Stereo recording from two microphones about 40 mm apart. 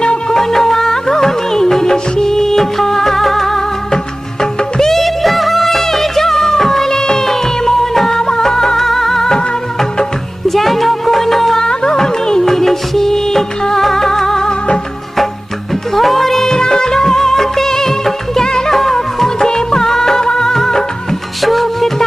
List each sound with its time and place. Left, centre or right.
0.0 s music: left
0.3 s music: centre
4.8 s music of bollywood: centre
10.5 s music: centre
11.6 s music: centre
16.0 s music of bollywood: centre
21.4 s music: centre